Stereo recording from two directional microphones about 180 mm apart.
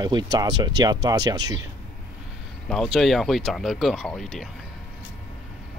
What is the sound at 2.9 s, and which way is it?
Speech, centre (ahead or behind).